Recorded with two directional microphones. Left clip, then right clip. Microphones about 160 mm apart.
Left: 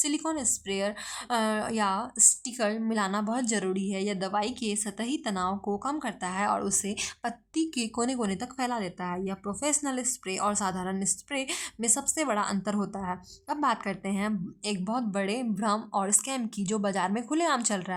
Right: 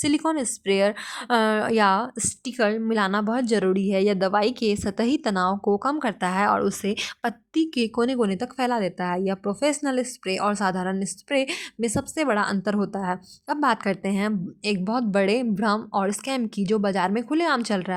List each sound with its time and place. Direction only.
0.0 s speech: 30° right (ahead or behind)